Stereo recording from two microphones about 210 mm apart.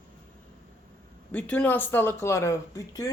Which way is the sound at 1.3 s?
5° left (ahead or behind).